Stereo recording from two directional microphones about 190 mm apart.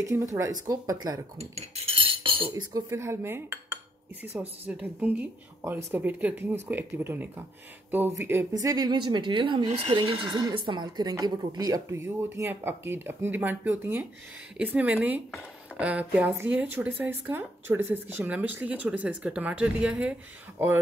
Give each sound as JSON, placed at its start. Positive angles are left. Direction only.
{"t": 0.1, "sound": "speech", "side_deg": -15}
{"t": 1.4, "sound": "speech", "side_deg": -35}